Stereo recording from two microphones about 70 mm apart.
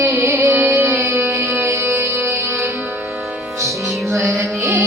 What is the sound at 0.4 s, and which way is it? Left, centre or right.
Music, right.